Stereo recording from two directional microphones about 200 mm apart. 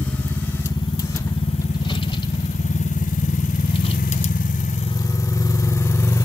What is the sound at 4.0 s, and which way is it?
Vehicle, 40° left (ahead or behind).